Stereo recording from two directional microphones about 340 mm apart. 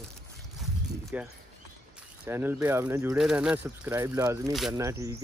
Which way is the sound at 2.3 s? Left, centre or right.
Centre.